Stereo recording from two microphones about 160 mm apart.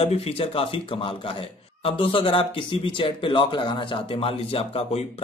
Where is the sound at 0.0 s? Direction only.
40° left (ahead or behind).